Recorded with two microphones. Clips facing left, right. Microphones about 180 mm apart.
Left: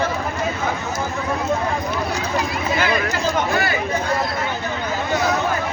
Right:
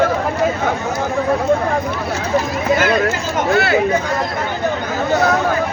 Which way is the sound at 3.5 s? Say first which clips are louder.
Right 6 dB; 70° right (ahead or behind).